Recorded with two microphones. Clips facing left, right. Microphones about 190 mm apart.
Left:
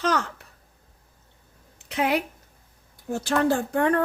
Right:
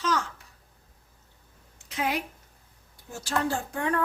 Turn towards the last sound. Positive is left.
turn(degrees=60)  # may be behind; listen again after turning